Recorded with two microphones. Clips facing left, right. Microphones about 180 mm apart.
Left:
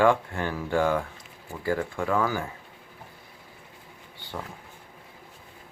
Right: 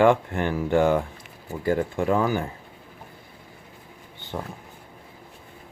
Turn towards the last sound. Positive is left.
turn(degrees=-20)  # may be behind; listen again after turning